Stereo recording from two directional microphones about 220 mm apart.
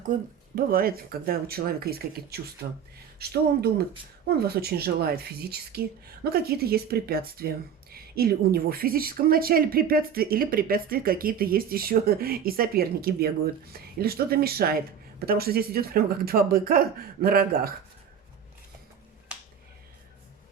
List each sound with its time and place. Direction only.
0.1 s speech: 40° right (ahead or behind)